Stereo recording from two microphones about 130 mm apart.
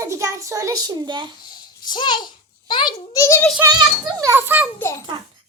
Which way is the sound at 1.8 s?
35° left (ahead or behind).